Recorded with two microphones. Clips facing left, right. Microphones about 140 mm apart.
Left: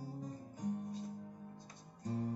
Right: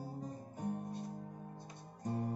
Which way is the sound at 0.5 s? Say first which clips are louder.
Even; 60° right (ahead or behind).